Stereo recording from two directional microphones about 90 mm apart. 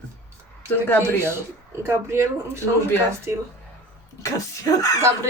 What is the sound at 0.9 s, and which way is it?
Speech, 25° left (ahead or behind).